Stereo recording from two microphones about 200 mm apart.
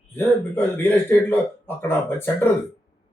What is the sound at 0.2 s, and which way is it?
Speech, 10° left (ahead or behind).